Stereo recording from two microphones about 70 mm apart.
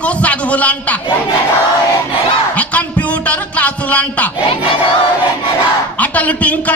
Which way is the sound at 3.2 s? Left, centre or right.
Centre.